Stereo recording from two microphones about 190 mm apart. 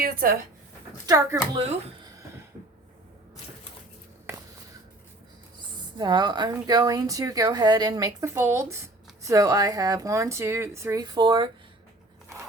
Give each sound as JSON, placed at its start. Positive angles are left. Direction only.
{"t": 0.0, "sound": "speech", "side_deg": -50}
{"t": 1.0, "sound": "a woman's voice", "side_deg": -15}
{"t": 6.0, "sound": "a woman's voice", "side_deg": -20}